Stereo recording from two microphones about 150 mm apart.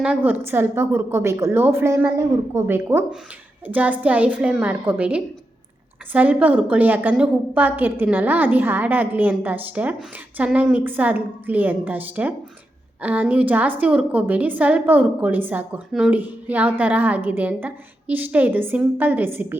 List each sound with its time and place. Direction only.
0.0 s a woman's voice: 10° right (ahead or behind)